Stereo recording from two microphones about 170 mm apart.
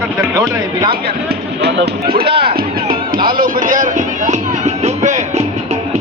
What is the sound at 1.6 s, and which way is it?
Speech, 70° right (ahead or behind).